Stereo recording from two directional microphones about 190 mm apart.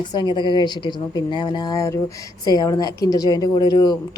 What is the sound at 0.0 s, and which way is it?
Speech, 25° left (ahead or behind).